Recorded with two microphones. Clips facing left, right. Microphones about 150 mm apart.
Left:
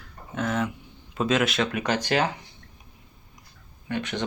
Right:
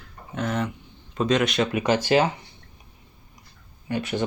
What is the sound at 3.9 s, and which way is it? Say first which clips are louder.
Speech: right 3 dB; 5° right (ahead or behind).